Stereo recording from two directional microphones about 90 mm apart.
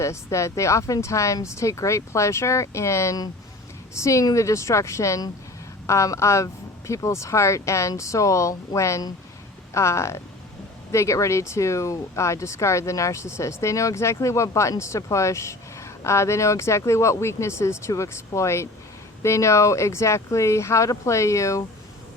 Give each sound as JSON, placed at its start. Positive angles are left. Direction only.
{"t": 0.0, "sound": "speech", "side_deg": 35}